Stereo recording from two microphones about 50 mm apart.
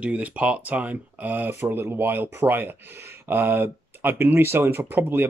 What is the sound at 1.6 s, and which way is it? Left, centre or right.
Speech, right.